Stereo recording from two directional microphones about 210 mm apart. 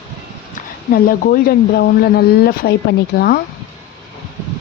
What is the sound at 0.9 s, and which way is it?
Speech, 45° left (ahead or behind).